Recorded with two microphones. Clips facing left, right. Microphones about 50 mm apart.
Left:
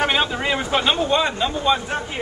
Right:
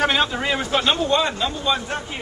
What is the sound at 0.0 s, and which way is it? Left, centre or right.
A man's voice, centre.